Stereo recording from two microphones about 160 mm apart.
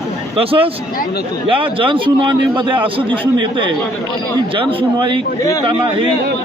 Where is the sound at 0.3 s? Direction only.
35° right (ahead or behind).